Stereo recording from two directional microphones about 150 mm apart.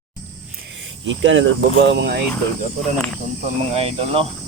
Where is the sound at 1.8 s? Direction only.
90° right.